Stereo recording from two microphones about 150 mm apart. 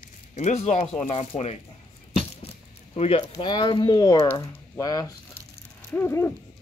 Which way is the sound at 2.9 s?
40° left (ahead or behind).